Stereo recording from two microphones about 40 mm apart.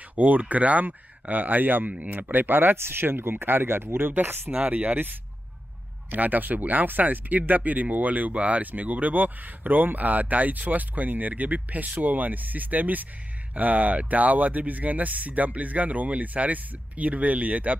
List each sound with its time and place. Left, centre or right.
0.1 s speech: right
4.6 s speech: right
6.1 s speech: right